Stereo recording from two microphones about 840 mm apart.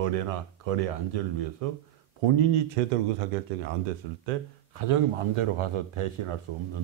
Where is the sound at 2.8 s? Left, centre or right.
Right.